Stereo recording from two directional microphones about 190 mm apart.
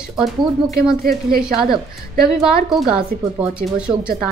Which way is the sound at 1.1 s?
50° right (ahead or behind).